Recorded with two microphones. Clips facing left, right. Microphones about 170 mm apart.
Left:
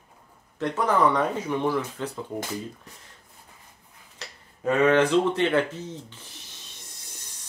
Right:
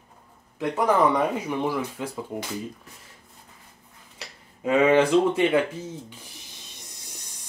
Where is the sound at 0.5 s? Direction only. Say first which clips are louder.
Right 2 dB; 10° right (ahead or behind).